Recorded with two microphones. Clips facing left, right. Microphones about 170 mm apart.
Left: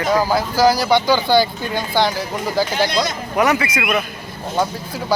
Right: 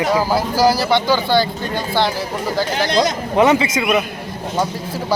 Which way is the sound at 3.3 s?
25° right (ahead or behind).